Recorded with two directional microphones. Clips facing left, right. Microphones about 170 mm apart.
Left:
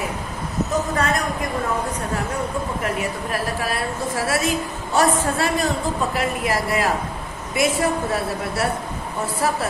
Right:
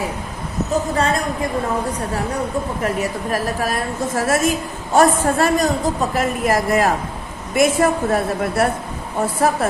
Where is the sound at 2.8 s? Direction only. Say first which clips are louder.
Right 3 dB; 40° right (ahead or behind).